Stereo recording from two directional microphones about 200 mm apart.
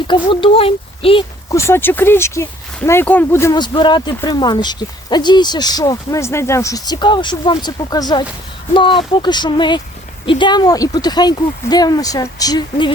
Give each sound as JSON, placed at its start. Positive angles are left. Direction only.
{"t": 0.1, "sound": "speech", "side_deg": 25}
{"t": 1.5, "sound": "speech", "side_deg": 15}